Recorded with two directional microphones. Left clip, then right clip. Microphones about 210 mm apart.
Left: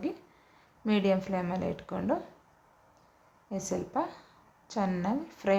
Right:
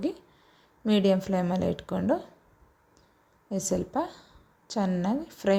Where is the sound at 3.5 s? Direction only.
25° right (ahead or behind).